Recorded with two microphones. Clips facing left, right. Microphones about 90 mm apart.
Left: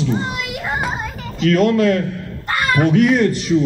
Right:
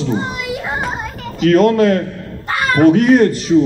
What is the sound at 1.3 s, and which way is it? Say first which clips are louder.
Speech: right 4 dB; 45° right (ahead or behind).